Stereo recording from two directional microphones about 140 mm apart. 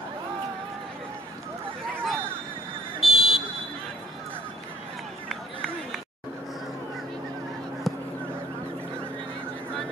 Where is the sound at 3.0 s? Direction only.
Centre (ahead or behind).